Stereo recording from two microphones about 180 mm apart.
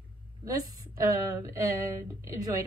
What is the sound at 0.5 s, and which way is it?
A woman's voice, 20° right (ahead or behind).